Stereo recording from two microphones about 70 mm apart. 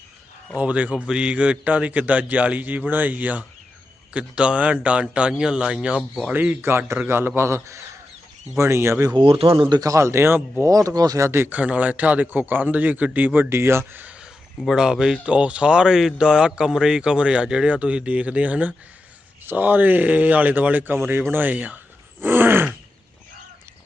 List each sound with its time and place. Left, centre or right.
0.5 s a man's voice: right
6.3 s a man's voice: right
6.6 s a man's voice: right
9.6 s a man's voice: right
9.9 s a man's voice: right
10.7 s speech: right
11.2 s a man's voice: right
11.5 s a man's voice: right
14.7 s a man's voice: centre
22.2 s groan: right